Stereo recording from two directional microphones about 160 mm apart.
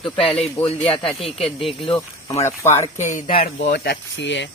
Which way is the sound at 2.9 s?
55° left (ahead or behind).